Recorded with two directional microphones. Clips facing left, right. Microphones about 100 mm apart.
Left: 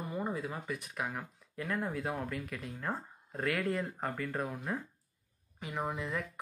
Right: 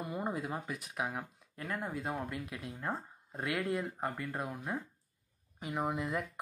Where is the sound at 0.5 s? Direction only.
10° right (ahead or behind).